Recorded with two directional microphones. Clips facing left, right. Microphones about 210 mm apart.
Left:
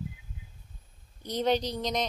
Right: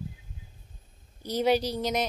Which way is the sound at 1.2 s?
5° right (ahead or behind).